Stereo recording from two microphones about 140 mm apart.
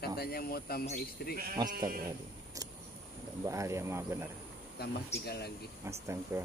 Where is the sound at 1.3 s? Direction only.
90° right.